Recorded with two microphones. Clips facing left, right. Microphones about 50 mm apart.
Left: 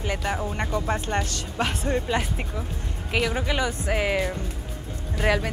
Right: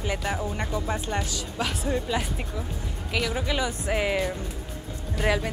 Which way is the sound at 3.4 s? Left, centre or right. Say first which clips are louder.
Left 2 dB; left.